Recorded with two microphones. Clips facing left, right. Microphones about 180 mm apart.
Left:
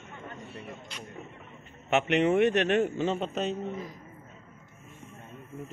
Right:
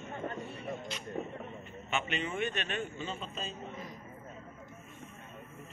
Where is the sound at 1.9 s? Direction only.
70° left (ahead or behind).